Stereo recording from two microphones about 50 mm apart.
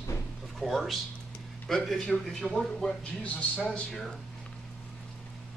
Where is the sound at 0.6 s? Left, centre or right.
Centre.